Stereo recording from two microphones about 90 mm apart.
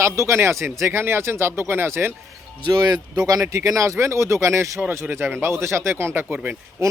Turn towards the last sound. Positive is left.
turn(degrees=-30)  # may be behind; listen again after turning